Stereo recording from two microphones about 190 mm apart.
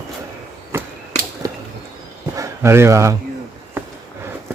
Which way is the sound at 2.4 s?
15° right (ahead or behind).